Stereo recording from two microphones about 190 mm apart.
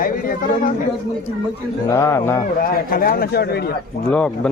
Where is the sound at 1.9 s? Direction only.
15° left (ahead or behind).